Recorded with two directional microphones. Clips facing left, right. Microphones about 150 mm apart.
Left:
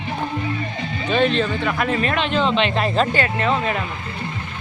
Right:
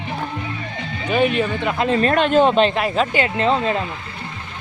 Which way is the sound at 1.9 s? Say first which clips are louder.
Right 5 dB; 40° right (ahead or behind).